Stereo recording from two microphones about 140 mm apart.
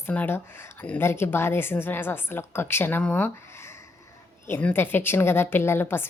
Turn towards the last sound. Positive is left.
turn(degrees=15)  # may be behind; listen again after turning